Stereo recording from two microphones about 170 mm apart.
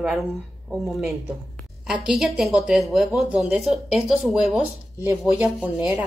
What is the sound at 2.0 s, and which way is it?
Speech, centre (ahead or behind).